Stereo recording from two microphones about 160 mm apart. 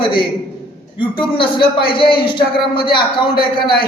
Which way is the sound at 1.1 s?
30° left (ahead or behind).